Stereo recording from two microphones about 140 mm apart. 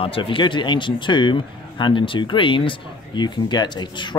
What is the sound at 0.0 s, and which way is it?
A man's voice, 40° left (ahead or behind).